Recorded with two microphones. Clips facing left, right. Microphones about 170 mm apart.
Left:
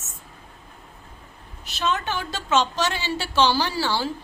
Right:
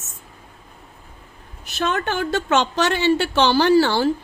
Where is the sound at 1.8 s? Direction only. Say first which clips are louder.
Right 4 dB; 55° right (ahead or behind).